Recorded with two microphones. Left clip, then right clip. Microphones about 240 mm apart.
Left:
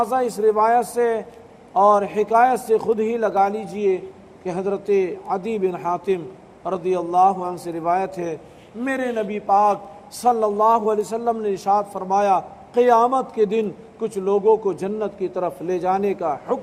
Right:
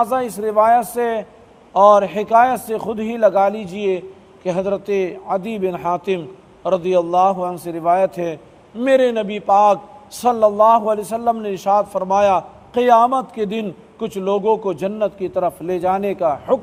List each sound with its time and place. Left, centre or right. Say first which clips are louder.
0.0 s a man's voice: even; right